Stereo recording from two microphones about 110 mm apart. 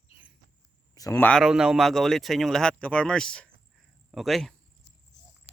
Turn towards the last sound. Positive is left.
turn(degrees=0)  # may be behind; listen again after turning